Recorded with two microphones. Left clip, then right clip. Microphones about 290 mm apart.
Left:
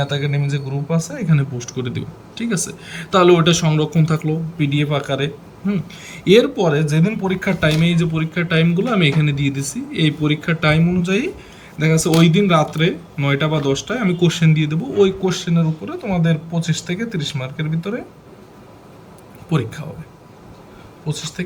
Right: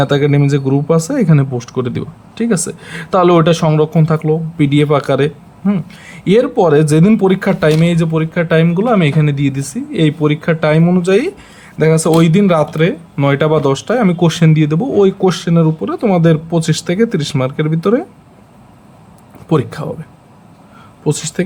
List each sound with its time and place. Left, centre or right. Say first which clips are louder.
0.1 s speech: right 11 dB; centre
19.5 s speech: right 8 dB; centre
21.1 s speech: right 10 dB; centre